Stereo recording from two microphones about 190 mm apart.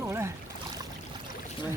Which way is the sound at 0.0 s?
15° right (ahead or behind).